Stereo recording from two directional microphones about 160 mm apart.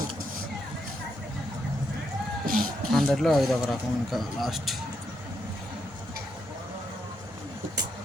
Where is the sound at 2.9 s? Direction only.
Centre (ahead or behind).